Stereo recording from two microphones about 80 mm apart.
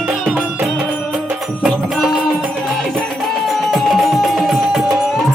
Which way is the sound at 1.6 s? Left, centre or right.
Centre.